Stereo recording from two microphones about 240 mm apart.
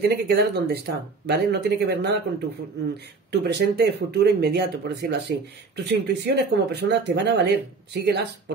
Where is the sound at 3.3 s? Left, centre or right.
Right.